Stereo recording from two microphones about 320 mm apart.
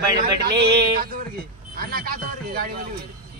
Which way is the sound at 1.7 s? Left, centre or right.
Right.